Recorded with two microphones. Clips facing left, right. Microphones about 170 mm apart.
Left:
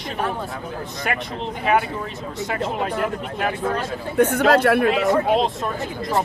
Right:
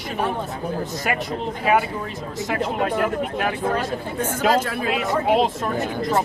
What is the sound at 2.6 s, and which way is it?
Speech, centre (ahead or behind).